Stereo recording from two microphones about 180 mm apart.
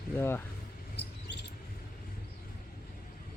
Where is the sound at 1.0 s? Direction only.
70° left (ahead or behind).